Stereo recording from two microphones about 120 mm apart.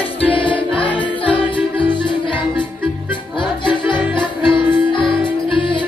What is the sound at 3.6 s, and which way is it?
Music, 40° left (ahead or behind).